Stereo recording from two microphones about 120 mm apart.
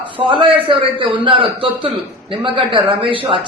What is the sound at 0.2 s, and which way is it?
A man's voice, 50° right (ahead or behind).